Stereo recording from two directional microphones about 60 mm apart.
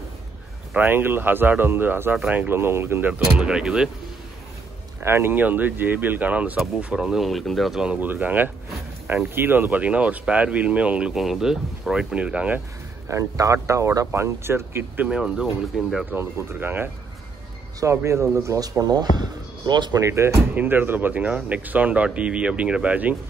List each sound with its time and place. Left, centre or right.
0.7 s speech: right
2.5 s speech: right
3.1 s speech: centre
5.0 s speech: right
6.8 s speech: centre
7.2 s speech: centre
8.0 s speech: right
11.1 s speech: centre; by 12.6 s right
13.1 s speech: right
15.0 s speech: centre
16.1 s speech: right
17.7 s speech: right
20.0 s speech: right
20.5 s speech: right